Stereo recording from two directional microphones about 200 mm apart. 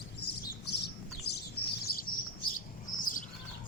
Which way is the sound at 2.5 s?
40° left (ahead or behind).